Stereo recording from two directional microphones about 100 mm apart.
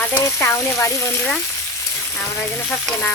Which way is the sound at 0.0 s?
20° left (ahead or behind).